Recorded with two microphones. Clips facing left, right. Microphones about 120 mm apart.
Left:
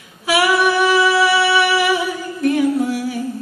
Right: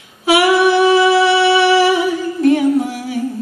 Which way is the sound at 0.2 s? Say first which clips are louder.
Right 4 dB; 25° right (ahead or behind).